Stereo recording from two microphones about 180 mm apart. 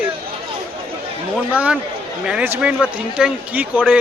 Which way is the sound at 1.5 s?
5° right (ahead or behind).